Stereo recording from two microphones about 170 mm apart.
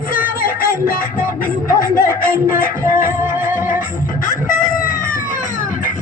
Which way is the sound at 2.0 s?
15° right (ahead or behind).